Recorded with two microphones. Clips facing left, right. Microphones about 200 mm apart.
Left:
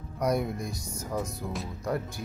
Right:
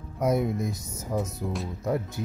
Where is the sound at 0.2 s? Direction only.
20° right (ahead or behind).